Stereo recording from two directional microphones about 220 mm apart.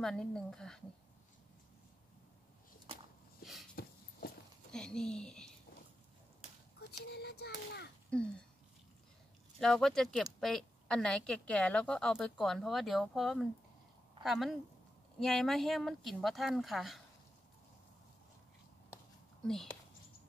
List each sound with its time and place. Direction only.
0.0 s a woman's voice: 5° left (ahead or behind)
3.8 s horse: 40° left (ahead or behind)
4.7 s a sound: 5° left (ahead or behind)
6.9 s speech: 45° left (ahead or behind)
8.1 s a woman's voice: 5° left (ahead or behind)
9.6 s a woman's voice: centre (ahead or behind)
19.4 s speech: centre (ahead or behind)